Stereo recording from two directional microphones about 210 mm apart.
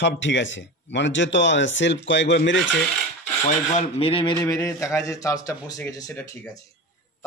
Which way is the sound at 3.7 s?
25° left (ahead or behind).